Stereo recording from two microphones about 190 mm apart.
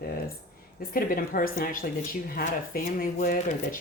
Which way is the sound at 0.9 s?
50° left (ahead or behind).